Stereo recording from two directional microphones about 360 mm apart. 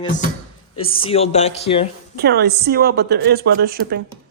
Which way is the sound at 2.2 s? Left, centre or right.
Right.